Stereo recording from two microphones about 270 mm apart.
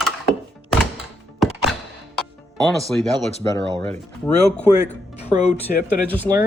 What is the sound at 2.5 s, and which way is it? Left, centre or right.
Speech, centre.